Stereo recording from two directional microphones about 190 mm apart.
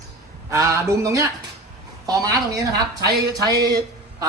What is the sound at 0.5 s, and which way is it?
A woman's voice, 15° right (ahead or behind).